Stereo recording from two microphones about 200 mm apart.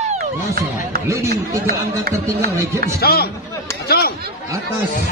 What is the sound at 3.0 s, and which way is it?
Speech, 50° left (ahead or behind).